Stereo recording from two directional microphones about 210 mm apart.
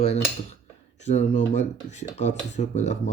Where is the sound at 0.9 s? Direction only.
35° left (ahead or behind).